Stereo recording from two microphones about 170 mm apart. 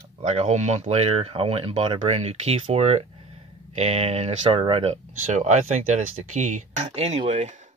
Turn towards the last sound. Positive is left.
turn(degrees=-40)  # may be behind; listen again after turning